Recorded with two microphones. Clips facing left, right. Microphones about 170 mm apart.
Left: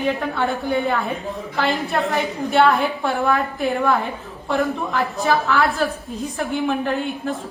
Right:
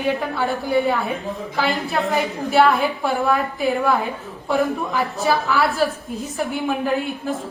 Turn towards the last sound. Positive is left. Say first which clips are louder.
# right 1 dB
turn(degrees=0)  # may be behind; listen again after turning